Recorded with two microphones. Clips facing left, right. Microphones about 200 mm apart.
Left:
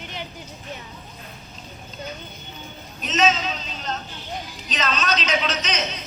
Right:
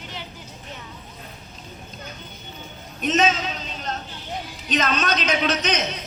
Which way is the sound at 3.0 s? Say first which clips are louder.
Right 1 dB; 55° right (ahead or behind).